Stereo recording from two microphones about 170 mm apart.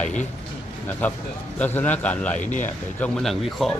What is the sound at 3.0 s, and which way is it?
Speech, centre (ahead or behind).